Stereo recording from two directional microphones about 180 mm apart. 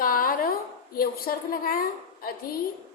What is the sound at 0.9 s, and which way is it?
Speech, 55° left (ahead or behind).